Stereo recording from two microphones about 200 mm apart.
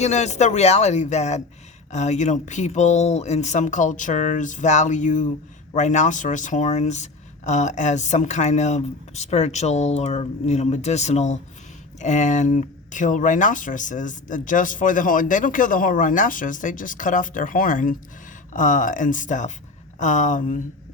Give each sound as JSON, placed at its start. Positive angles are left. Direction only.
{"t": 0.0, "sound": "speech", "side_deg": 35}